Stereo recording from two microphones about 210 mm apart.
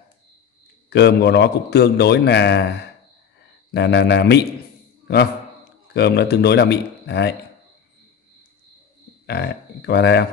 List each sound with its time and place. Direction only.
0.8 s a man's voice: 55° left (ahead or behind)
3.7 s a man's voice: 55° left (ahead or behind)
9.2 s a man's voice: 50° left (ahead or behind)